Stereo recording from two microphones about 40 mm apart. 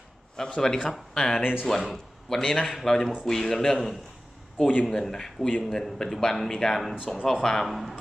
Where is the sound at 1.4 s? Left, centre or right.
Centre.